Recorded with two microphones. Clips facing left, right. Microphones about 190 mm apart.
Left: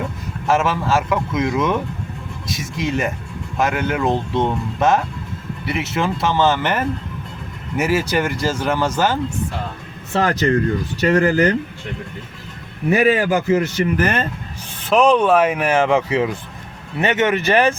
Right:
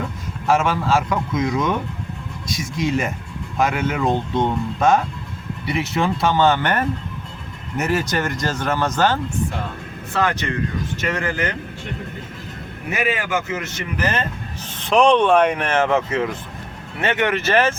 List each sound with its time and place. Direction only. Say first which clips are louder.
0.4 s speech: even; centre (ahead or behind)
10.2 s a man's voice: left 5 dB; 35° left (ahead or behind)
12.9 s a man's voice: left 7 dB; 35° left (ahead or behind)
14.8 s speech: left 1 dB; 5° left (ahead or behind)